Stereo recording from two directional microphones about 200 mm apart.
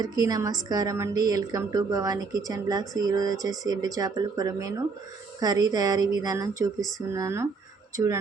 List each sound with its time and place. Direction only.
0.0 s a woman's voice: 20° right (ahead or behind)